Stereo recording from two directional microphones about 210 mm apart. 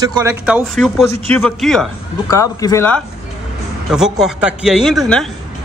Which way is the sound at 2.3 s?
15° left (ahead or behind).